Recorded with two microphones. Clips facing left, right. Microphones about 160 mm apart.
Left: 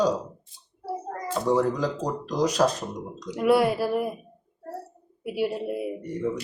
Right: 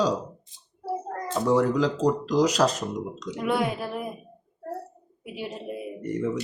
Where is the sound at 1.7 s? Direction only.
90° right.